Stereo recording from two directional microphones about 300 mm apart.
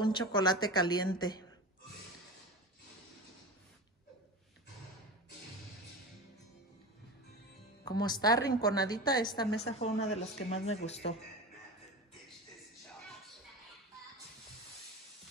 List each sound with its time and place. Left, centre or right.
0.0 s a woman's voice: centre
7.8 s a woman's voice: centre